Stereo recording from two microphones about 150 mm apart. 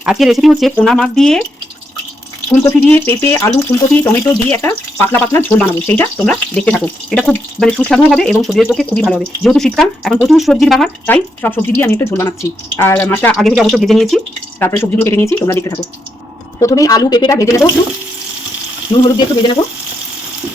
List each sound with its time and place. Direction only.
0.0 s speech: 5° right (ahead or behind)
2.6 s speech: 15° left (ahead or behind)
13.3 s speech: 5° left (ahead or behind)
14.6 s a woman's voice: 15° left (ahead or behind)
18.9 s frying: 35° left (ahead or behind)